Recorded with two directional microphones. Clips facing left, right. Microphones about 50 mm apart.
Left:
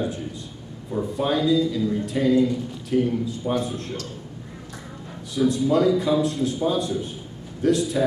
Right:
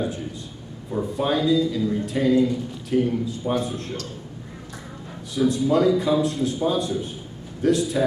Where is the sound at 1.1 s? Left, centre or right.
Right.